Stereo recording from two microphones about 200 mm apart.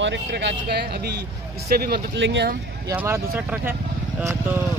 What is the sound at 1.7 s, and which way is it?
Speech, 50° right (ahead or behind).